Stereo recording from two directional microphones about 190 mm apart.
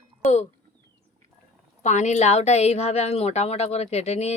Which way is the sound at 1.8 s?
40° left (ahead or behind).